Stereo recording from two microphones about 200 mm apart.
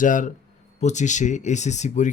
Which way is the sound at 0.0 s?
40° left (ahead or behind).